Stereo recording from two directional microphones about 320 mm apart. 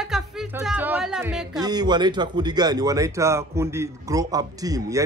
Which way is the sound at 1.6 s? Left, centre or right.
Centre.